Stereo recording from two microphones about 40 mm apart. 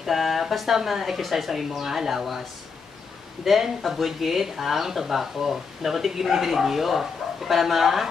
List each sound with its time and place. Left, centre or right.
0.0 s speech: centre
3.4 s speech: centre